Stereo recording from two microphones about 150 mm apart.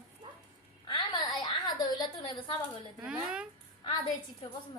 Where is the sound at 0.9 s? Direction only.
30° left (ahead or behind).